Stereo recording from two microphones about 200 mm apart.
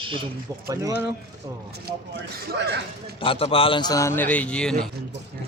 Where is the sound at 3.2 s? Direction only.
25° left (ahead or behind); by 4.8 s 5° left (ahead or behind).